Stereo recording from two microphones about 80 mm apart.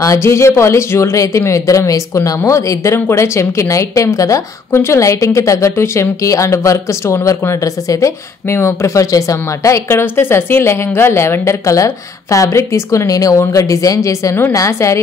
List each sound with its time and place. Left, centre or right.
0.0 s a woman's voice: left